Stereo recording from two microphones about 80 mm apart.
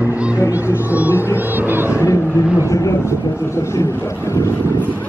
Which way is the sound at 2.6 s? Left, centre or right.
Left.